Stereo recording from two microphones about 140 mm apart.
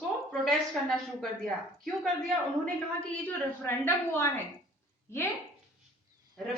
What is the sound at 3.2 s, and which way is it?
Speech, 15° left (ahead or behind).